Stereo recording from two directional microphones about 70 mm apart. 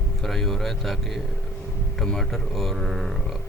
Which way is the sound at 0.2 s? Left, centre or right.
Centre.